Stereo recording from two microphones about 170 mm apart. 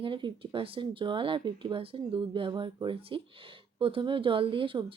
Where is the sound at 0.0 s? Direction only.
30° right (ahead or behind).